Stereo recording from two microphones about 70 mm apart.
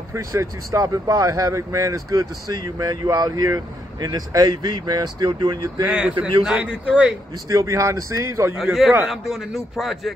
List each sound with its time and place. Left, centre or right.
0.1 s speech: right
5.9 s a man's voice: centre
7.4 s speech: right
9.0 s a man's voice: centre